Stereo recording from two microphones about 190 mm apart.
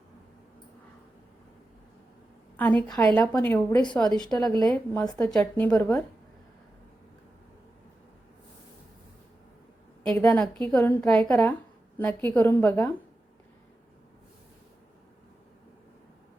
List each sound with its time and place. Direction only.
2.8 s a woman's voice: 5° left (ahead or behind)
4.2 s a woman's voice: 5° left (ahead or behind)
10.2 s a woman's voice: 15° left (ahead or behind)
10.6 s a woman's voice: 5° left (ahead or behind)